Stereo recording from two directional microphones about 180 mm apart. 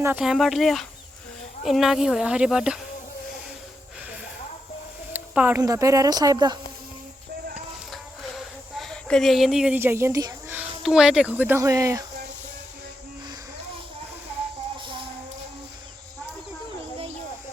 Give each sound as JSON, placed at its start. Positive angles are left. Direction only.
{"t": 0.0, "sound": "speech", "side_deg": -5}
{"t": 5.1, "sound": "speech", "side_deg": -10}
{"t": 8.8, "sound": "speech", "side_deg": 5}
{"t": 10.6, "sound": "speech", "side_deg": -5}
{"t": 14.8, "sound": "a sound", "side_deg": -25}